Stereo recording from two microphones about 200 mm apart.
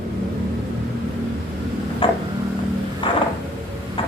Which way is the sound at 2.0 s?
25° left (ahead or behind).